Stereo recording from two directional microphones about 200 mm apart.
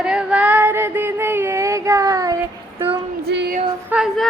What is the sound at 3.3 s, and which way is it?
Female singing, 55° right (ahead or behind).